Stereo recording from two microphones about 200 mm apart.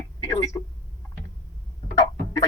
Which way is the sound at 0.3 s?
15° left (ahead or behind).